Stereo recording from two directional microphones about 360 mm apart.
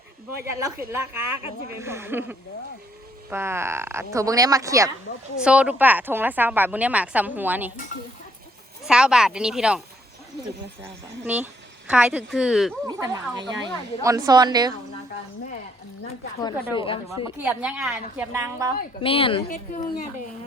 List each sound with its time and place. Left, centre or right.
0.4 s speech: centre
5.1 s speech: left
5.4 s a woman's voice: centre
8.9 s a woman's voice: centre
11.9 s a woman's voice: centre
16.4 s speech: centre
17.2 s a woman's voice: centre
18.8 s speech: centre